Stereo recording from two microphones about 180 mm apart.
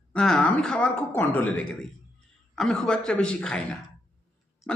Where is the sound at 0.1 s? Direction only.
5° left (ahead or behind).